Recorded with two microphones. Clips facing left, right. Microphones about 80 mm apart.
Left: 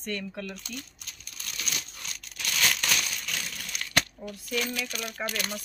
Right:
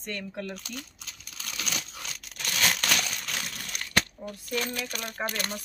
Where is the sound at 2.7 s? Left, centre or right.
Right.